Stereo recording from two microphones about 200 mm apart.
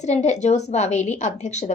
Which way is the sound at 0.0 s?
35° left (ahead or behind).